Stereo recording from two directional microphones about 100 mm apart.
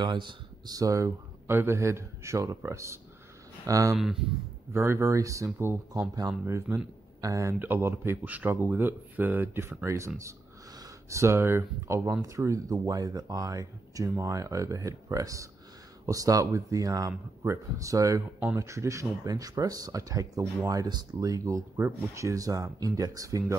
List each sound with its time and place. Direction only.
0.0 s speech: 50° right (ahead or behind)
0.7 s speech: 35° right (ahead or behind)
3.9 s a man's voice: 5° right (ahead or behind)
4.7 s speech: 25° right (ahead or behind)
7.5 s speech: 20° right (ahead or behind); by 21.6 s 35° right (ahead or behind)
21.7 s speech: 25° right (ahead or behind)